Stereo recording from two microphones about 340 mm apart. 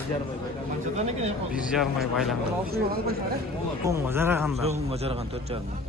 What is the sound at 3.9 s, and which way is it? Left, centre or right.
A man's voice, centre.